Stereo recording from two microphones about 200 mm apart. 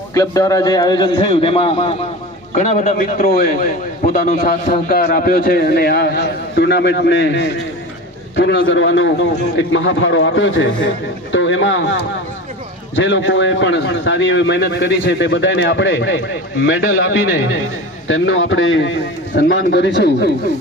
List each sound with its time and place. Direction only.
0.1 s a man's voice: 15° left (ahead or behind); by 16.2 s 70° left (ahead or behind)
16.6 s a man's voice: 80° left
18.1 s a man's voice: 80° left
19.4 s a man's voice: 60° left (ahead or behind)